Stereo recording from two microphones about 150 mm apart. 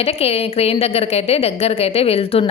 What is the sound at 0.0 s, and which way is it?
Speech, 40° left (ahead or behind).